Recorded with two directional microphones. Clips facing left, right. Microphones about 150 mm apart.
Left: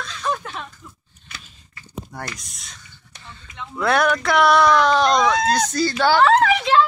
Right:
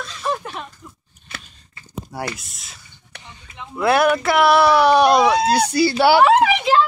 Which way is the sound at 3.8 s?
5° right (ahead or behind).